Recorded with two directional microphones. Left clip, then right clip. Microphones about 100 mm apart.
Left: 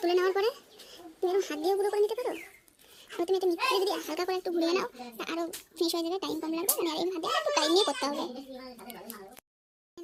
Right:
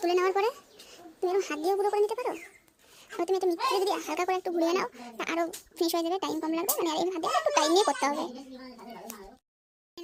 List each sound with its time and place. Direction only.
0.0 s a child's voice: 10° right (ahead or behind)